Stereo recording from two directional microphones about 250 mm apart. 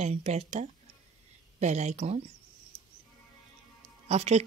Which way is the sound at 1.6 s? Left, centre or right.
Right.